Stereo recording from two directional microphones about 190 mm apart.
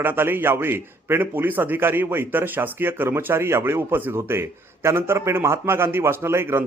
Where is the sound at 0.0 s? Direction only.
10° right (ahead or behind).